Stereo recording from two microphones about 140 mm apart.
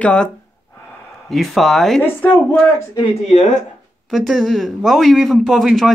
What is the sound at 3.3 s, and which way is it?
Speech, 60° left (ahead or behind).